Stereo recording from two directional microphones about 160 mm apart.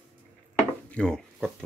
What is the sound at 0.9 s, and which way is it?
Speech, 5° left (ahead or behind).